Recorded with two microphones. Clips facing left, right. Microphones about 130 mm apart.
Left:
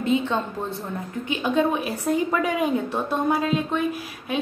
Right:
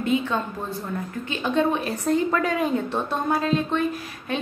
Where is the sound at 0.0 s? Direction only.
25° left (ahead or behind).